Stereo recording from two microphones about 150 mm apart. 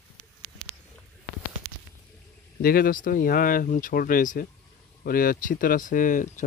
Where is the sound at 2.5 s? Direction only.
80° left.